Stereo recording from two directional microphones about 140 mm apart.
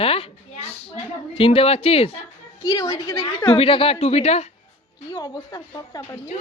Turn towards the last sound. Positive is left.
turn(degrees=25)  # may be behind; listen again after turning